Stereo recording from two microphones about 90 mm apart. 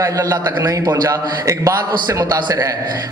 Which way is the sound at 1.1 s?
35° right (ahead or behind).